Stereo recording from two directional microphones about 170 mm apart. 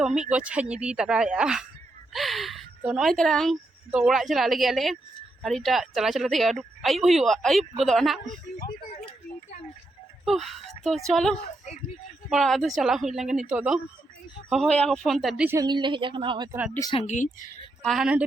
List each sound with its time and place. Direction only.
0.0 s a woman's voice: 5° right (ahead or behind)
8.9 s a sound: 40° left (ahead or behind)
10.2 s a woman's voice: centre (ahead or behind)
15.4 s a woman's voice: 20° right (ahead or behind)
16.9 s speech: 40° left (ahead or behind)
17.8 s a woman's voice: 5° right (ahead or behind)